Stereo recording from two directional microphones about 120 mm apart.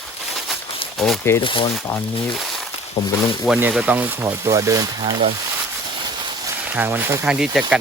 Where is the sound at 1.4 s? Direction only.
45° left (ahead or behind).